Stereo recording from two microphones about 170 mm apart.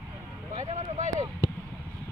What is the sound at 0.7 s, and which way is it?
Speech, 35° right (ahead or behind).